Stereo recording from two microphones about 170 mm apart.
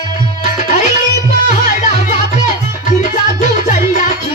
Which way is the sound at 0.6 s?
50° left (ahead or behind).